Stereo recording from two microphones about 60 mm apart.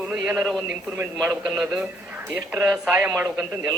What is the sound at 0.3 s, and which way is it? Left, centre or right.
Speech, centre.